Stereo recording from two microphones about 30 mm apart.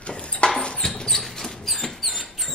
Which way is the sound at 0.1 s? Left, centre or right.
Left.